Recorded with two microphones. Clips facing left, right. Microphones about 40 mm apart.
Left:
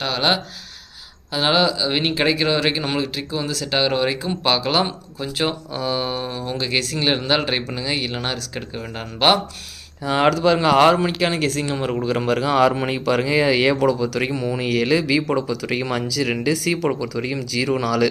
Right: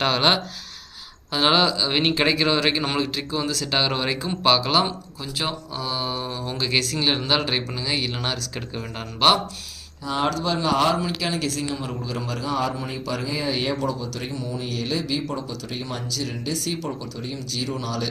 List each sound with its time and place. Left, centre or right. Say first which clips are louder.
0.1 s speech: even; centre
4.9 s speech: left 3 dB; left
10.0 s speech: left 7 dB; left